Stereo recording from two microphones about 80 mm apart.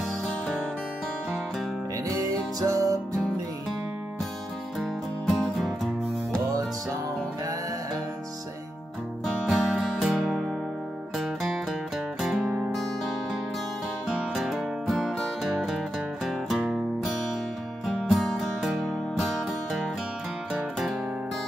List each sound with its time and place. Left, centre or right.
2.6 s music: right
5.3 s music: centre
9.2 s music: centre
9.9 s music: centre
15.4 s music: centre
17.8 s music: centre